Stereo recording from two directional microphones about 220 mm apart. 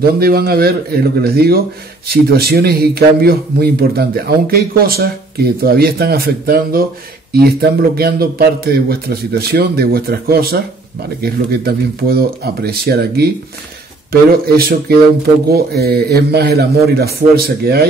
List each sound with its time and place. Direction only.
0.2 s a man's voice: 45° right (ahead or behind)
14.4 s a man's voice: 45° right (ahead or behind)